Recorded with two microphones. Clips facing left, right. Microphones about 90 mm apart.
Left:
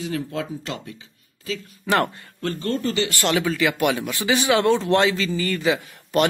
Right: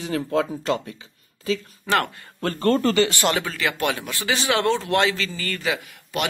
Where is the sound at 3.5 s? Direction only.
15° left (ahead or behind).